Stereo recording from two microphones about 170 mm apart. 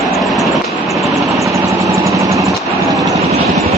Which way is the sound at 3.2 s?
40° right (ahead or behind).